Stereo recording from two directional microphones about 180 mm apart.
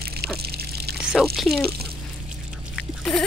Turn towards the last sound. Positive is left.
turn(degrees=0)  # may be behind; listen again after turning